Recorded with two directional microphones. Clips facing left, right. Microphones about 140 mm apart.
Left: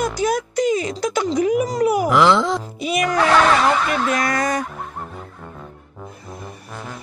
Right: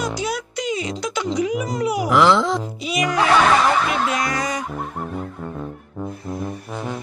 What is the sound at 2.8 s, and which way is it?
Speech, 50° left (ahead or behind).